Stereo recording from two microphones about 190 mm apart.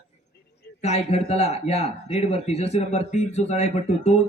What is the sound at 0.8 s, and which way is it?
Speech, 35° left (ahead or behind).